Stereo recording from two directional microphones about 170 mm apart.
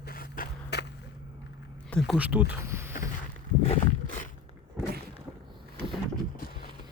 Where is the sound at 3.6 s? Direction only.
50° left (ahead or behind).